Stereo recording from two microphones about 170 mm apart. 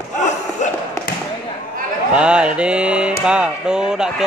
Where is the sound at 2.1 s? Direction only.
5° right (ahead or behind).